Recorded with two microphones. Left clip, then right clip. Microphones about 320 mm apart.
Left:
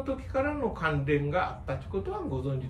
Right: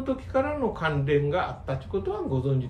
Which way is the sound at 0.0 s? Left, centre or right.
Right.